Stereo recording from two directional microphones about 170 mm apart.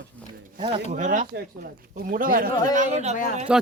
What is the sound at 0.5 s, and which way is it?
Speech, 40° right (ahead or behind).